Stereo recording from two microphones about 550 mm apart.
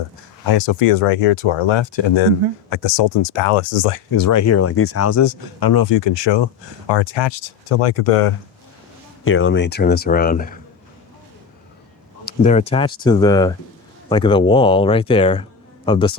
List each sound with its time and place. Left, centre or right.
0.4 s speech: left
4.1 s speech: left
7.8 s speech: left
9.2 s speech: left
12.2 s speech: centre